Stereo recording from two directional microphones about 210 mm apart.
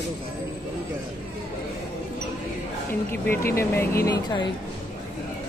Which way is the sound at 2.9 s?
10° left (ahead or behind).